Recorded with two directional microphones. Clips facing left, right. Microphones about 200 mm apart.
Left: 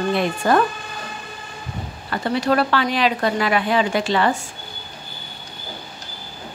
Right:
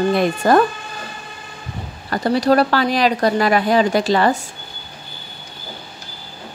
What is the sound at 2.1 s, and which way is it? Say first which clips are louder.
A woman's voice: right 4 dB; 40° right (ahead or behind).